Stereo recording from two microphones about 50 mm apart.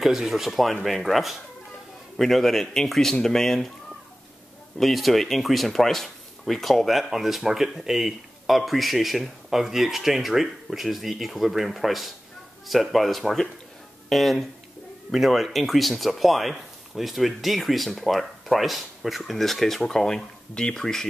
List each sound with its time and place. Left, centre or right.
0.0 s a man's voice: centre
4.7 s speech: centre